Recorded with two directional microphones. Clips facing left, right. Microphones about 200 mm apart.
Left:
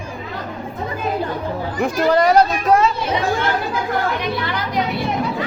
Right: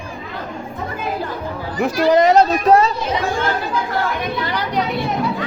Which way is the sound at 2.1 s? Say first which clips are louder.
Right 2 dB; 20° right (ahead or behind).